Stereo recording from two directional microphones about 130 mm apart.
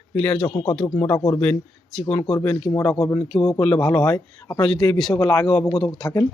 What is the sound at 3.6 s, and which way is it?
Speech, 10° left (ahead or behind).